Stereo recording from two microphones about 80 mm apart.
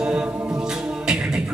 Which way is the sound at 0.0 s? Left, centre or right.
Centre.